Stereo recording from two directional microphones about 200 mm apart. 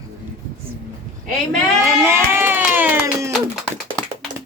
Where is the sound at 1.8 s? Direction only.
10° right (ahead or behind).